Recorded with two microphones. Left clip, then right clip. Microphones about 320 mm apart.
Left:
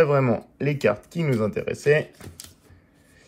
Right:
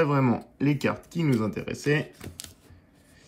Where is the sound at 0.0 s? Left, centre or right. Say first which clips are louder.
Left 5 dB; centre.